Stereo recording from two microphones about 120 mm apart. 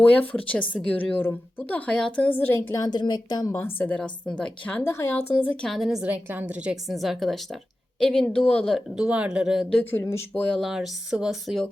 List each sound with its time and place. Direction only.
0.2 s a woman's voice: 10° left (ahead or behind)
2.6 s speech: 30° left (ahead or behind)
3.5 s a woman's voice: 20° left (ahead or behind)
5.6 s a woman's voice: centre (ahead or behind)
9.9 s speech: 20° left (ahead or behind)
10.6 s a woman's voice: 5° right (ahead or behind)